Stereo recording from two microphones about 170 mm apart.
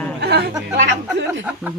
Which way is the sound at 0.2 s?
75° right (ahead or behind).